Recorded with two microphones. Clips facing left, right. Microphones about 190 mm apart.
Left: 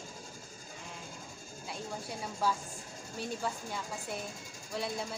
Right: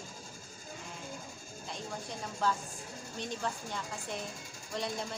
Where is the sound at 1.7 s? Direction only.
10° left (ahead or behind).